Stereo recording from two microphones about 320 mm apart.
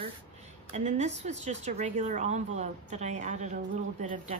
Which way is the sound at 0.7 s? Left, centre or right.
Right.